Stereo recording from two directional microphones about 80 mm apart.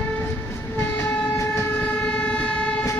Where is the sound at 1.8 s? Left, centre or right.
Centre.